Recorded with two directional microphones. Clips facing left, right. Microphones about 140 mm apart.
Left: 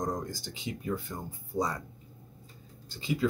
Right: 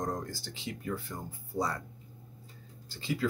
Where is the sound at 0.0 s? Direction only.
15° left (ahead or behind).